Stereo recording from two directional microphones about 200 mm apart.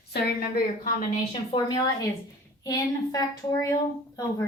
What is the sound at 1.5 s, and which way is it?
A woman's voice, 20° left (ahead or behind).